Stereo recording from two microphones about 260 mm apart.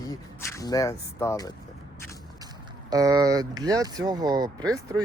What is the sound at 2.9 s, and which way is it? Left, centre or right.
Speech, centre.